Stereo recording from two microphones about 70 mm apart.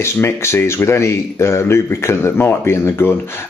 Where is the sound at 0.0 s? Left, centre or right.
Left.